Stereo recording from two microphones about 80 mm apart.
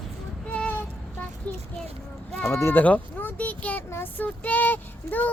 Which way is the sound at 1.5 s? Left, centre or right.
Centre.